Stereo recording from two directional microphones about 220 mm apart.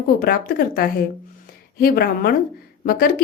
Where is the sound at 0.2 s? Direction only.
45° left (ahead or behind).